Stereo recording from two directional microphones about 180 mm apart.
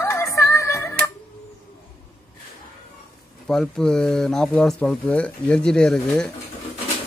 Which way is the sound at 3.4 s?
Centre (ahead or behind).